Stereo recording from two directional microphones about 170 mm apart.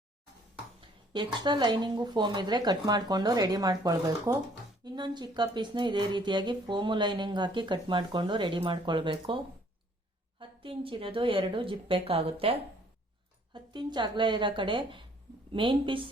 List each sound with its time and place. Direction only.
1.1 s speech: 25° right (ahead or behind)